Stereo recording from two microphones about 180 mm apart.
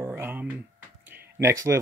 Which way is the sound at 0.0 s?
10° right (ahead or behind).